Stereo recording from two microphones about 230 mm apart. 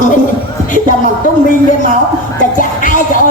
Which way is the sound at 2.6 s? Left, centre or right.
Left.